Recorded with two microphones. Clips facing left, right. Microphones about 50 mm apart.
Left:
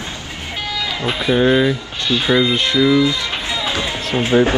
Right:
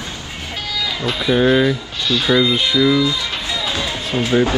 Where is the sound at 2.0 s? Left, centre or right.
Left.